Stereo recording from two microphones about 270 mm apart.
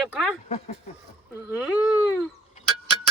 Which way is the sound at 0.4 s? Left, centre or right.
Left.